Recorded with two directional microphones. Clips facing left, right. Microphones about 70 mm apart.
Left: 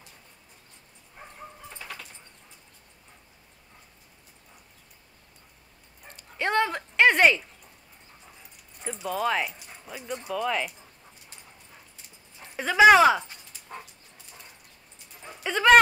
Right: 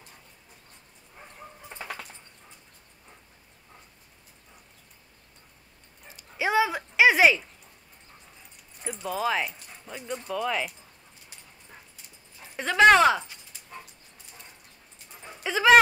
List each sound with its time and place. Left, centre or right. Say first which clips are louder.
1.7 s a sound: right 6 dB; right
6.0 s dog: right 1 dB; centre
8.8 s speech: left 1 dB; centre
12.4 s speech: left 1 dB; centre
15.2 s dog: even; centre